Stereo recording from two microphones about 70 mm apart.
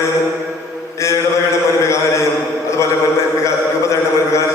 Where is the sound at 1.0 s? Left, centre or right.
Left.